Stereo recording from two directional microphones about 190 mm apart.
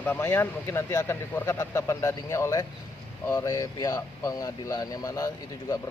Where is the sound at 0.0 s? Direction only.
10° left (ahead or behind).